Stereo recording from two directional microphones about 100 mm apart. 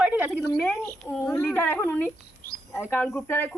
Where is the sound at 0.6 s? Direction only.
20° left (ahead or behind).